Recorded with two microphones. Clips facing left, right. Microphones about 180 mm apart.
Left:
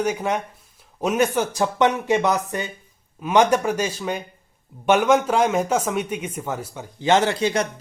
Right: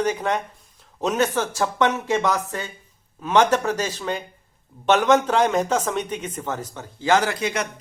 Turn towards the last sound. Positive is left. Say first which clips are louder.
# left 4 dB
turn(degrees=30)  # may be behind; listen again after turning